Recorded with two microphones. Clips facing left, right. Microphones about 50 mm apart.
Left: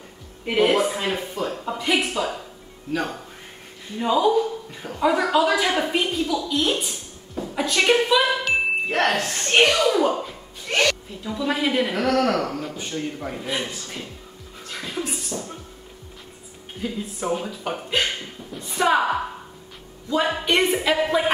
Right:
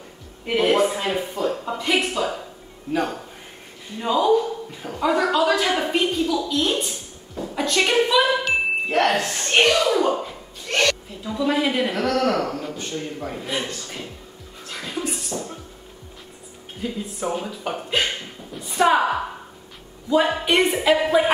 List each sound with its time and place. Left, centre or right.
0.5 s speech: centre
4.0 s a man's voice: centre
14.7 s music: centre
16.8 s a woman's voice: centre
20.1 s speech: centre